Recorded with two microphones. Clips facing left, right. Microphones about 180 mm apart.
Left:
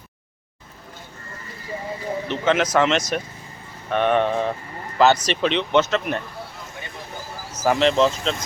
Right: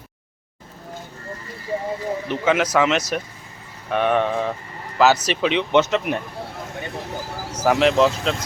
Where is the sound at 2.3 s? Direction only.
10° right (ahead or behind).